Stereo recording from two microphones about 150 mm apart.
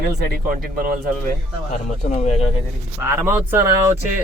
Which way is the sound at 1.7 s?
55° left (ahead or behind).